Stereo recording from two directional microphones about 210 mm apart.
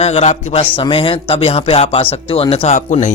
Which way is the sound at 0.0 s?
30° left (ahead or behind).